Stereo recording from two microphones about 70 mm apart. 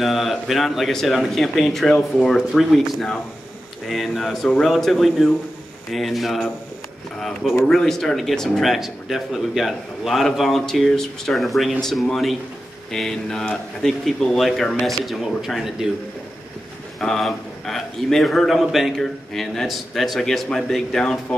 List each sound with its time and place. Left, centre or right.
0.0 s a man's voice: centre
17.0 s a man's voice: centre